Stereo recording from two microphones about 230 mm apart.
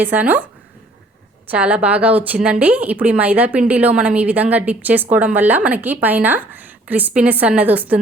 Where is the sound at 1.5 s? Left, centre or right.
Centre.